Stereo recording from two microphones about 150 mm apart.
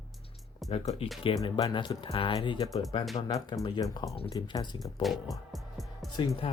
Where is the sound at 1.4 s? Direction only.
35° left (ahead or behind).